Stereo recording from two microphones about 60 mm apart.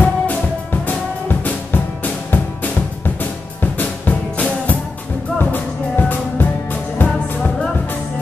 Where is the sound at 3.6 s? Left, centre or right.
Left.